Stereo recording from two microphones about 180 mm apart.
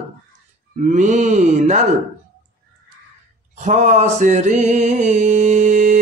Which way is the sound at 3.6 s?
40° right (ahead or behind).